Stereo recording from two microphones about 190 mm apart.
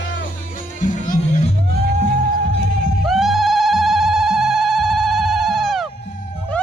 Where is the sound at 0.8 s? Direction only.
40° left (ahead or behind).